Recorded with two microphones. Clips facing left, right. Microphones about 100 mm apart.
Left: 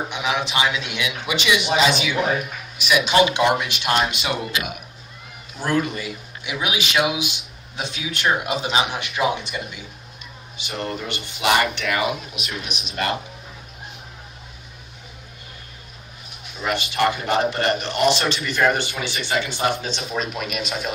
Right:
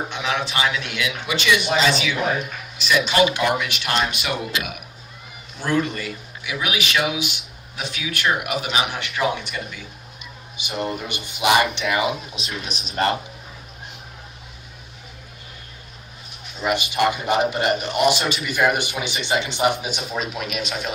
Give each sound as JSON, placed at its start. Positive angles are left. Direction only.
{"t": 0.1, "sound": "a man's voice", "side_deg": 15}
{"t": 5.5, "sound": "a man's voice", "side_deg": 10}
{"t": 6.4, "sound": "a man's voice", "side_deg": 25}
{"t": 10.6, "sound": "a man's voice", "side_deg": -15}
{"t": 12.4, "sound": "speech", "side_deg": -35}
{"t": 16.6, "sound": "a man's voice", "side_deg": -15}
{"t": 20.0, "sound": "speech", "side_deg": 0}